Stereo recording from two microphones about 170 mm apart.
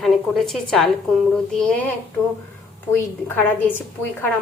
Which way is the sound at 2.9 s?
10° left (ahead or behind).